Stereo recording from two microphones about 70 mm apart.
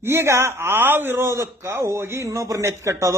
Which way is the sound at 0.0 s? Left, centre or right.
Right.